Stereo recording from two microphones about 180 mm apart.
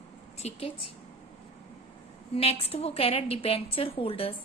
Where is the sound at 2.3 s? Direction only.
35° left (ahead or behind).